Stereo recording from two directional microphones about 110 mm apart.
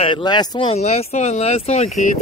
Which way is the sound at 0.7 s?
75° left (ahead or behind).